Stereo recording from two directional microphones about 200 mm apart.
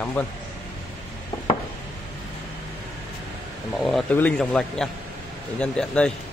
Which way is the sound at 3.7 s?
Centre (ahead or behind).